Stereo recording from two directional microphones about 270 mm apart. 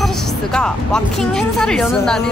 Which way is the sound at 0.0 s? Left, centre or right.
Centre.